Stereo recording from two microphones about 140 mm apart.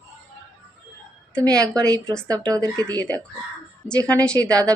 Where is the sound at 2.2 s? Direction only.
25° right (ahead or behind).